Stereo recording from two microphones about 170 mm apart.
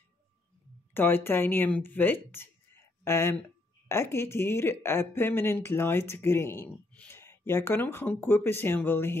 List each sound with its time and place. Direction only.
0.9 s speech: 10° left (ahead or behind)